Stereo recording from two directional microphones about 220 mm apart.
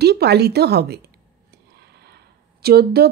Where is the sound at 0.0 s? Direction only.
50° right (ahead or behind).